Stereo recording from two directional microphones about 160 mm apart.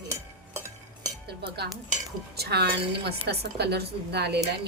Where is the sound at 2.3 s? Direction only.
90° right.